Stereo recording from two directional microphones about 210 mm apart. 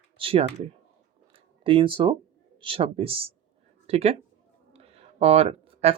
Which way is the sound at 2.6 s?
25° right (ahead or behind).